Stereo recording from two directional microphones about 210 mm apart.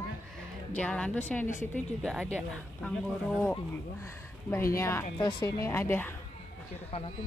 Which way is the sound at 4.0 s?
15° left (ahead or behind).